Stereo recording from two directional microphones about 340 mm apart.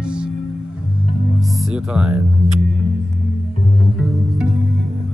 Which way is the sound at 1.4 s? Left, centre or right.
Centre.